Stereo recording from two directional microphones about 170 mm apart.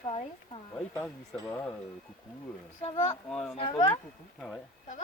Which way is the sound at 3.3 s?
5° left (ahead or behind).